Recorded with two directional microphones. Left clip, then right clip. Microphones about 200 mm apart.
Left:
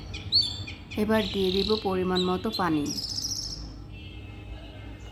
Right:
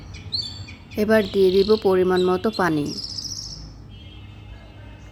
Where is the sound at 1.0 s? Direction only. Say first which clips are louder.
Right 8 dB; 15° right (ahead or behind).